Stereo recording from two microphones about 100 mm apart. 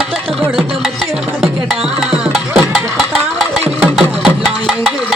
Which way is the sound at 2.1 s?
Centre (ahead or behind).